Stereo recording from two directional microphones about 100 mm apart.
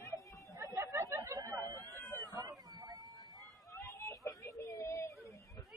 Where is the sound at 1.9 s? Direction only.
20° left (ahead or behind).